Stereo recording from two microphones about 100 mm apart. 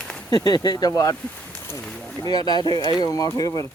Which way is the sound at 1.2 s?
10° left (ahead or behind).